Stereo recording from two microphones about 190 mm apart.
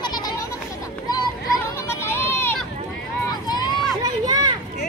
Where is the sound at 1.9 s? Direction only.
15° left (ahead or behind).